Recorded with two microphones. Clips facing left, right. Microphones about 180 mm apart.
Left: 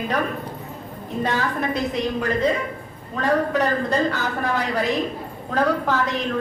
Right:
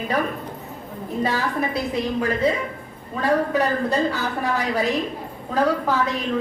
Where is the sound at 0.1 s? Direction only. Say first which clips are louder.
Even; 10° right (ahead or behind).